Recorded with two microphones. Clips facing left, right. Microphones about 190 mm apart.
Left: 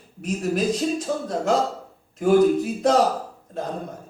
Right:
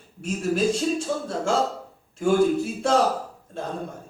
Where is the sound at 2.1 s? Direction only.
30° right (ahead or behind).